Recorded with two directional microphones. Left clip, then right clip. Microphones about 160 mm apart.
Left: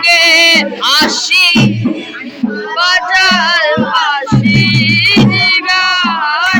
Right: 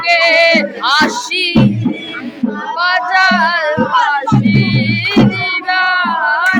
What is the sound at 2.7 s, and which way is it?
Music, 15° right (ahead or behind).